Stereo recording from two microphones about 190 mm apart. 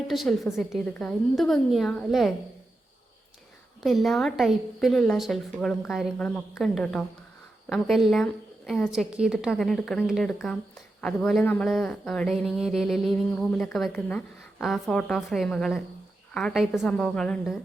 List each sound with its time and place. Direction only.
0.1 s speech: centre (ahead or behind)
3.8 s speech: centre (ahead or behind)